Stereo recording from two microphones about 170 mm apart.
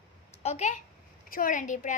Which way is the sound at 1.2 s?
55° left (ahead or behind).